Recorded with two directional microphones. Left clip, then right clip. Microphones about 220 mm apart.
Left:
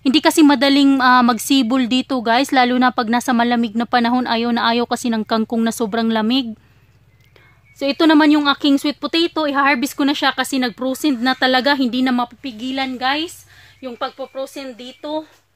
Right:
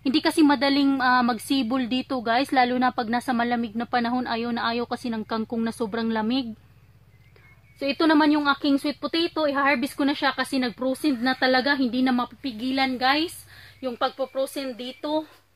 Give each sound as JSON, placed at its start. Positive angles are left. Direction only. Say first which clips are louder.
{"t": 0.0, "sound": "a woman's voice", "louder": "left 8 dB", "side_deg": 50}
{"t": 7.8, "sound": "a woman's voice", "louder": "left 7 dB", "side_deg": 50}
{"t": 12.4, "sound": "a woman's voice", "louder": "left 2 dB", "side_deg": 15}